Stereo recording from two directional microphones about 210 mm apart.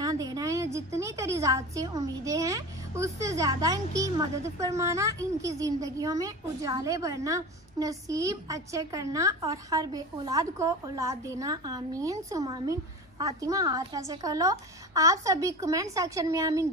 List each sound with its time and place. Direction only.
0.0 s a woman's voice: 15° right (ahead or behind)